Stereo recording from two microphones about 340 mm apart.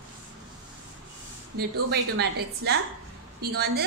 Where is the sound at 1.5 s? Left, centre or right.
Right.